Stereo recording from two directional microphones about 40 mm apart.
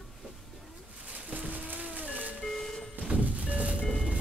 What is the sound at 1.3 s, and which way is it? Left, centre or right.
Music, right.